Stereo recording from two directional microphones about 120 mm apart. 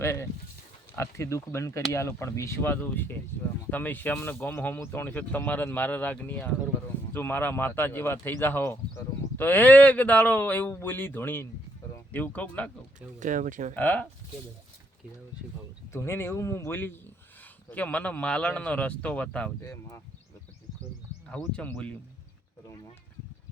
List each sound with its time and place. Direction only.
0.0 s speech: 20° left (ahead or behind)
13.1 s speech: 90° right
13.7 s speech: 10° left (ahead or behind)
15.9 s speech: 20° left (ahead or behind)
19.6 s speech: 25° left (ahead or behind)
21.2 s speech: 10° left (ahead or behind)
22.6 s a sound: 30° left (ahead or behind)